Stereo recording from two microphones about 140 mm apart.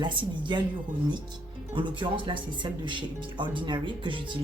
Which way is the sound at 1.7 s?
35° right (ahead or behind).